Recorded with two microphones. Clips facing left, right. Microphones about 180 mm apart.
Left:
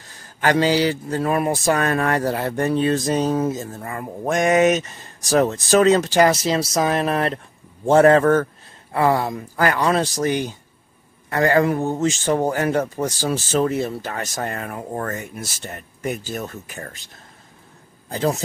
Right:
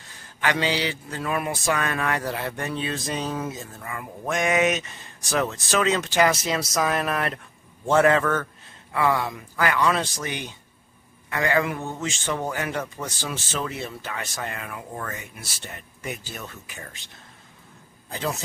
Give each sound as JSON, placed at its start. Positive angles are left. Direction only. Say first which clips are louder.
{"t": 0.4, "sound": "a man's voice", "louder": "left 7 dB", "side_deg": 40}
{"t": 18.1, "sound": "a man's voice", "louder": "left 7 dB", "side_deg": 40}